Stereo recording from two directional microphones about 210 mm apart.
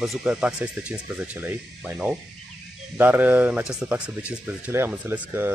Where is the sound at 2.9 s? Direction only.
10° right (ahead or behind).